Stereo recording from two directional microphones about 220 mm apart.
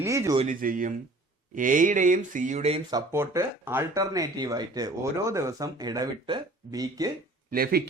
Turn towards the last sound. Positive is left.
turn(degrees=-45)  # may be behind; listen again after turning